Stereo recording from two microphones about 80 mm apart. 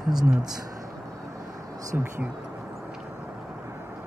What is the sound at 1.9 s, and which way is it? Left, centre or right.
Speech, right.